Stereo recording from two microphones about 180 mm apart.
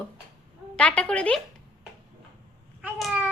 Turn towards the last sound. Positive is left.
turn(degrees=-5)  # may be behind; listen again after turning